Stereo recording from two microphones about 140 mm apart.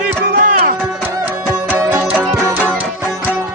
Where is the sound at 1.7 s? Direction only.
15° right (ahead or behind).